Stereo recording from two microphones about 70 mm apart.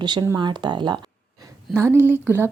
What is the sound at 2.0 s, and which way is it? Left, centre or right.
Speech, right.